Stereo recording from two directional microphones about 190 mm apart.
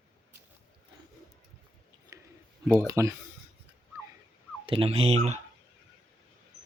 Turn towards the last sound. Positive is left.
turn(degrees=-35)  # may be behind; listen again after turning